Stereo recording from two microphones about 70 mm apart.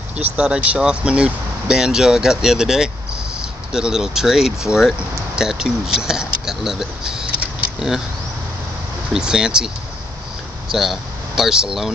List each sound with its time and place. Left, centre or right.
0.4 s speech: centre
9.1 s speech: centre
10.7 s speech: centre